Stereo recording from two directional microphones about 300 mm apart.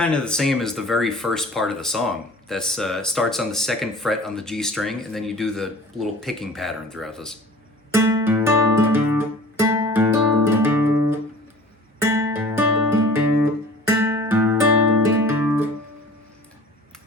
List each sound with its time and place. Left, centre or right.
0.0 s speech: centre
7.9 s guitar: centre
12.0 s music: centre